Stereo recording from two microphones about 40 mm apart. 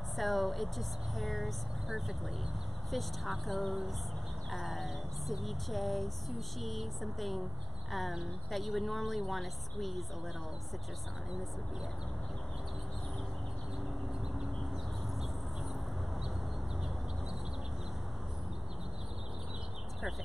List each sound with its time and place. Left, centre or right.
0.2 s speech: centre
2.9 s speech: centre